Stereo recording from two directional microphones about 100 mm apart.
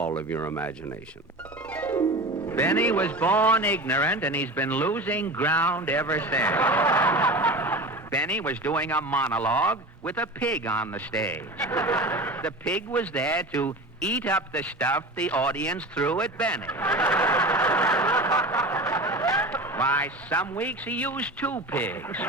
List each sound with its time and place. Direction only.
0.3 s speech: 25° left (ahead or behind)
1.7 s music: 15° left (ahead or behind)
2.5 s a man's voice: 20° left (ahead or behind)
17.0 s snicker: 20° left (ahead or behind)
19.5 s a man's voice: 15° left (ahead or behind)